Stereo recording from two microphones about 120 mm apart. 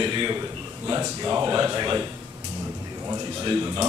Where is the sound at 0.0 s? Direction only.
40° right (ahead or behind).